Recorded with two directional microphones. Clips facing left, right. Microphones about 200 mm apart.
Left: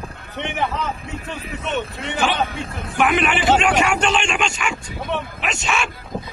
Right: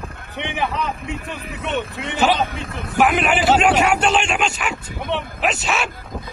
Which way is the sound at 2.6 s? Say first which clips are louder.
Right 1 dB; 25° left (ahead or behind).